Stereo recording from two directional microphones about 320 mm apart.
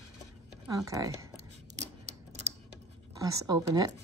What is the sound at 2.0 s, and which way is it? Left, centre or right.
Typewriter, right.